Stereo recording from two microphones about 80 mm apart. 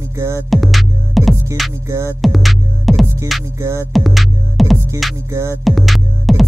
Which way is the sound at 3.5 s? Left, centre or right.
Right.